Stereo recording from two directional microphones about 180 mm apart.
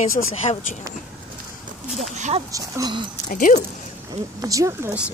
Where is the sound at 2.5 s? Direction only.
20° right (ahead or behind).